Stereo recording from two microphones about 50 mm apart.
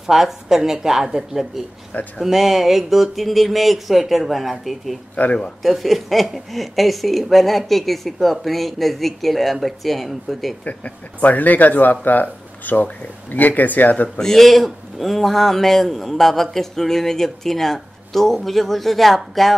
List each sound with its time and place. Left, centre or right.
0.0 s a man's voice: centre
5.1 s speech: left
5.6 s a man's voice: centre
10.6 s speech: left
14.0 s a man's voice: centre